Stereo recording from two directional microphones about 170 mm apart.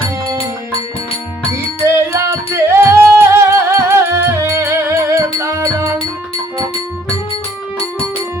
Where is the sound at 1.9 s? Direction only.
15° right (ahead or behind).